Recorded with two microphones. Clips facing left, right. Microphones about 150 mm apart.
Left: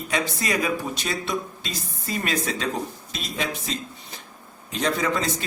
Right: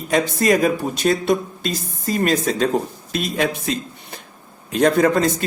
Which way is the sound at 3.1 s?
55° right (ahead or behind).